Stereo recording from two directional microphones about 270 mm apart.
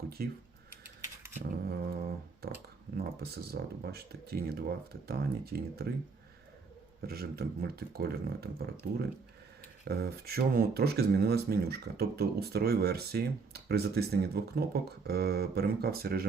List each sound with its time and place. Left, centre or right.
0.2 s speech: right
1.3 s a sound: right
3.5 s speech: right
7.0 s speech: right
9.8 s speech: right